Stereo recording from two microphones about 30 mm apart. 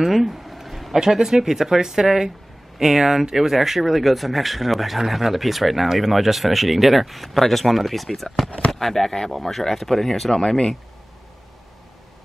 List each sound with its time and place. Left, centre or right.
0.0 s a sound: centre
0.9 s speech: centre
8.5 s speech: left
8.7 s speech: centre
10.3 s speech: centre